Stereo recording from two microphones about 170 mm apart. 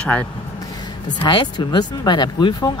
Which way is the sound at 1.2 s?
25° left (ahead or behind).